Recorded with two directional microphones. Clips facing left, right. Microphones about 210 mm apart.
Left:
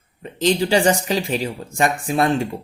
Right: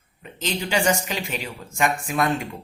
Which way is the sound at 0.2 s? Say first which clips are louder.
Left 10 dB; 35° left (ahead or behind).